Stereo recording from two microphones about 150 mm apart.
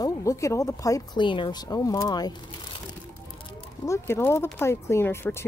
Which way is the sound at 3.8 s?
20° left (ahead or behind).